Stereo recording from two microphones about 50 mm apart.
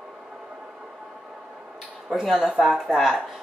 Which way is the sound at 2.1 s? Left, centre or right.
Centre.